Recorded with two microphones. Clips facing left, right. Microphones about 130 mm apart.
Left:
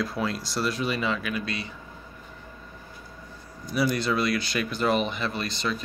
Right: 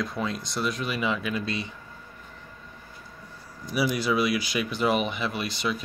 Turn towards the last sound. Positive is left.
turn(degrees=-10)  # may be behind; listen again after turning